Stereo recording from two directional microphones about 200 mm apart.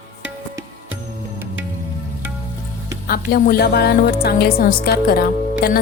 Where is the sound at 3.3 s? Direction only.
50° left (ahead or behind).